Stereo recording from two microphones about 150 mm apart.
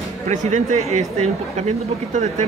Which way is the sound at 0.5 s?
50° right (ahead or behind).